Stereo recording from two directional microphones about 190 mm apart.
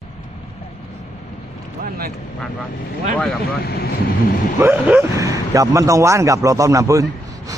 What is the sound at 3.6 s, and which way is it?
Speech, 55° left (ahead or behind).